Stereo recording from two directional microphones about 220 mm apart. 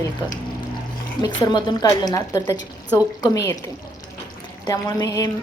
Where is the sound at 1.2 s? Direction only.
15° left (ahead or behind).